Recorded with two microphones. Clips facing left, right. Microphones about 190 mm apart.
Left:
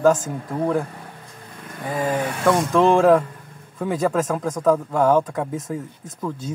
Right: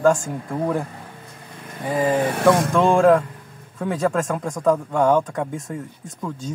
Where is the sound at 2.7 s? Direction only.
Centre (ahead or behind).